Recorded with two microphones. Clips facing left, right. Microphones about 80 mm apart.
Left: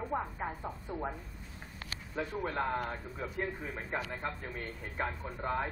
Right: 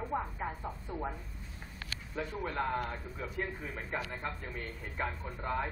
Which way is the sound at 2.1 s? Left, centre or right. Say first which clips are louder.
Left 1 dB; left.